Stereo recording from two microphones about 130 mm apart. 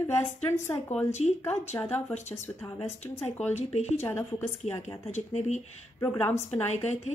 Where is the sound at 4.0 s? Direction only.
15° left (ahead or behind).